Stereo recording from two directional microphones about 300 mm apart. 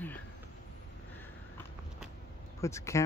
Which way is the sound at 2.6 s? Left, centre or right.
Centre.